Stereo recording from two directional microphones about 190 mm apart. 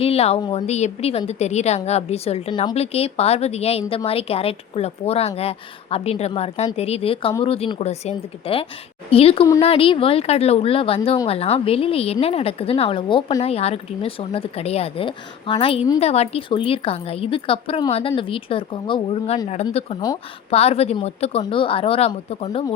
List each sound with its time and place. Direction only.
0.0 s a woman's voice: 30° left (ahead or behind)